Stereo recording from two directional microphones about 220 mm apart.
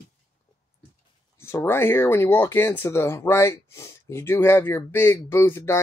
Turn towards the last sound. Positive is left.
turn(degrees=10)  # may be behind; listen again after turning